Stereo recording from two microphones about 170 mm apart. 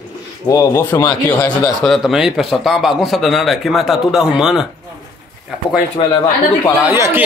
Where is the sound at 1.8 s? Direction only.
Centre (ahead or behind).